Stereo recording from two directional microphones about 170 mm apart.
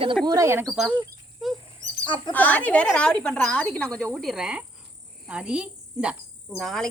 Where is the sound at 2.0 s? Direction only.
30° left (ahead or behind).